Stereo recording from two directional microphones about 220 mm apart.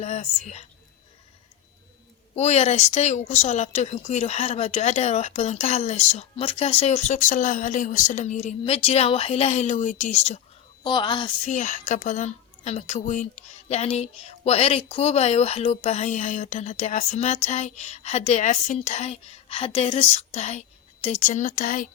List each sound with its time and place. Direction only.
0.0 s a woman's voice: 30° left (ahead or behind)
2.3 s a woman's voice: 30° left (ahead or behind)